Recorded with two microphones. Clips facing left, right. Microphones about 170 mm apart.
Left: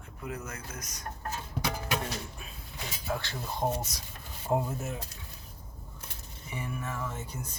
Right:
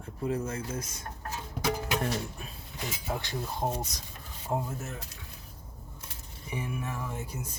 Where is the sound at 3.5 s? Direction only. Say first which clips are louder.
Left 3 dB; centre (ahead or behind).